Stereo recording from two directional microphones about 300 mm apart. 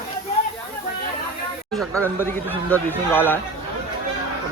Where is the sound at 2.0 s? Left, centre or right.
Centre.